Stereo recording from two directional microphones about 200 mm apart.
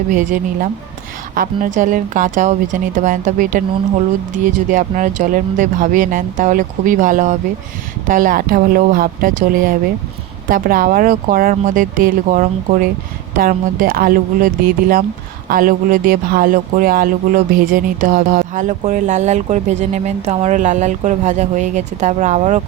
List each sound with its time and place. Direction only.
0.1 s speech: 40° right (ahead or behind)